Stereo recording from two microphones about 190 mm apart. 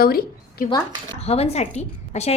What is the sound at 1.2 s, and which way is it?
A woman's voice, 30° left (ahead or behind).